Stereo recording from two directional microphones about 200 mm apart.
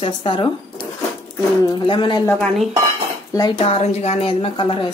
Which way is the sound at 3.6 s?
30° left (ahead or behind).